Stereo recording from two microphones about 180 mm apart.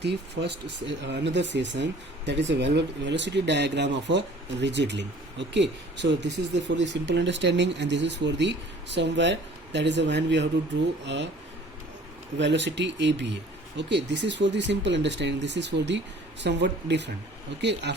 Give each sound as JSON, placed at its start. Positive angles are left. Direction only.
{"t": 0.0, "sound": "speech", "side_deg": -70}
{"t": 12.4, "sound": "speech", "side_deg": -80}